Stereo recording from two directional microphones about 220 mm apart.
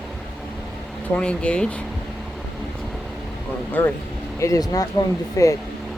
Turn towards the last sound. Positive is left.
turn(degrees=15)  # may be behind; listen again after turning